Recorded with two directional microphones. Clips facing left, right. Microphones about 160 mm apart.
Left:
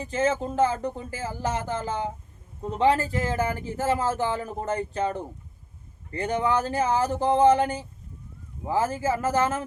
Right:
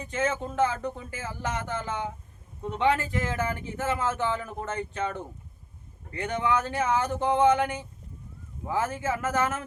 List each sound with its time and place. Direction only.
0.0 s speech: 30° left (ahead or behind)